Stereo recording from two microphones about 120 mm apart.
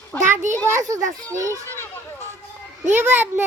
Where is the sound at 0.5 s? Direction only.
25° right (ahead or behind).